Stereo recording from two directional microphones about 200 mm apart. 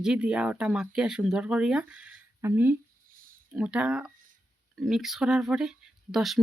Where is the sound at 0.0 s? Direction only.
5° right (ahead or behind).